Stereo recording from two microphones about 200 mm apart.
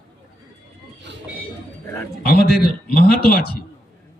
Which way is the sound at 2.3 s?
50° left (ahead or behind).